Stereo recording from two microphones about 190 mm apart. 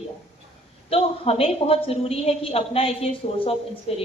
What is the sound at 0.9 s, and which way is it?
A woman's voice, 30° left (ahead or behind).